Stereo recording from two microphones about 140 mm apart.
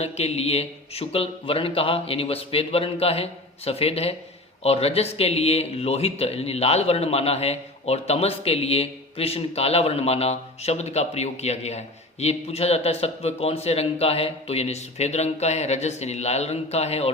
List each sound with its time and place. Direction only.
0.0 s speech: 50° left (ahead or behind)